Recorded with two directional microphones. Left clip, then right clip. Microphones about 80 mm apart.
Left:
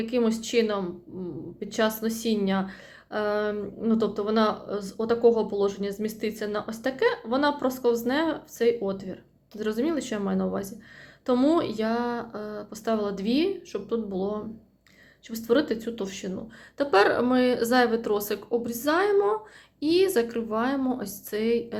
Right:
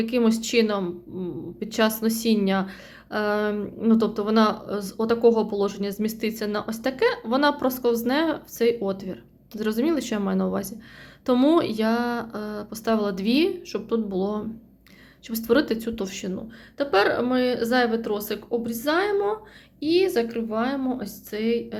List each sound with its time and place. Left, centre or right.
0.0 s a woman's voice: right
16.7 s speech: centre
19.8 s speech: left